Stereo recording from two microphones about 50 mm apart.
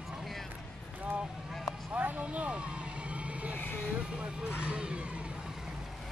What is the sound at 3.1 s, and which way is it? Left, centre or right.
Vehicle, right.